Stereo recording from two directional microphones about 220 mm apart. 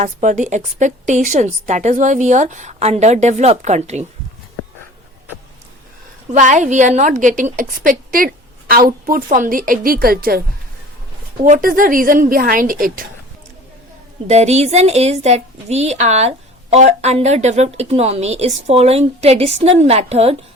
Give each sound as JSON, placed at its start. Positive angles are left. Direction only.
{"t": 0.0, "sound": "a woman's voice", "side_deg": -35}
{"t": 6.3, "sound": "a woman's voice", "side_deg": -35}
{"t": 11.4, "sound": "a woman's voice", "side_deg": -35}
{"t": 14.3, "sound": "a woman's voice", "side_deg": -30}